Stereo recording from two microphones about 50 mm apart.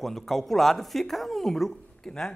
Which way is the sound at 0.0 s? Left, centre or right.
Centre.